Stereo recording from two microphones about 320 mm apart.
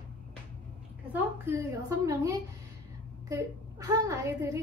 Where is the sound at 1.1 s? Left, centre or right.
Centre.